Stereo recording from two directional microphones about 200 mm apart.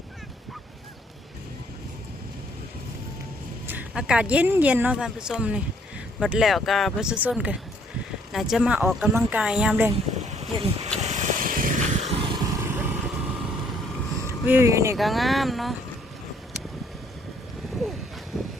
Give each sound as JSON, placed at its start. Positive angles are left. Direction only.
{"t": 3.7, "sound": "speech", "side_deg": -5}
{"t": 10.2, "sound": "a sound", "side_deg": -30}
{"t": 11.0, "sound": "vehicle", "side_deg": -35}
{"t": 12.5, "sound": "lawn mower", "side_deg": -10}
{"t": 14.4, "sound": "speech", "side_deg": -10}
{"t": 14.9, "sound": "speech", "side_deg": 0}
{"t": 18.3, "sound": "boat", "side_deg": 0}